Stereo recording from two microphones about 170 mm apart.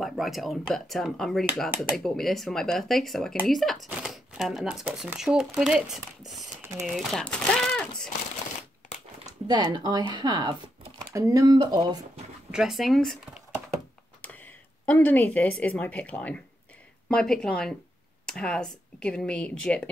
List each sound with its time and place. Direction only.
0.0 s speech: centre (ahead or behind)
9.7 s speech: 25° right (ahead or behind)
12.4 s speech: 5° right (ahead or behind)
14.2 s speech: 10° left (ahead or behind)